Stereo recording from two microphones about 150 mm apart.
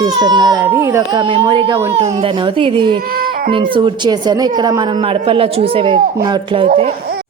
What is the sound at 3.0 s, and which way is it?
Baby cry, 80° right.